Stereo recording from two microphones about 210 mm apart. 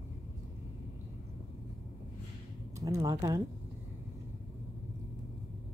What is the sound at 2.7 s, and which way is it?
Speech, 15° right (ahead or behind).